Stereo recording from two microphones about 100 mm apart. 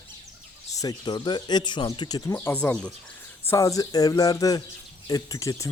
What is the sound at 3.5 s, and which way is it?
Speech, 30° left (ahead or behind).